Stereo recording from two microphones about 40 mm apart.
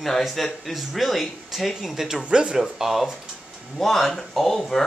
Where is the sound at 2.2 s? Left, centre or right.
Right.